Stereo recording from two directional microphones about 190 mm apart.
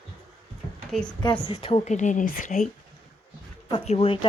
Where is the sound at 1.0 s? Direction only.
20° left (ahead or behind); by 2.6 s 40° left (ahead or behind).